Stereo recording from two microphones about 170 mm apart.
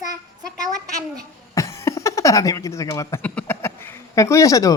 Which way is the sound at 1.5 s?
15° left (ahead or behind).